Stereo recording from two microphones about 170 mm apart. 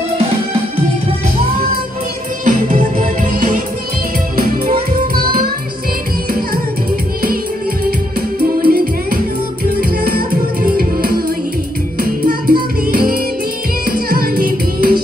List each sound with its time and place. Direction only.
2.4 s music: 50° right (ahead or behind)
8.4 s music: 60° right (ahead or behind)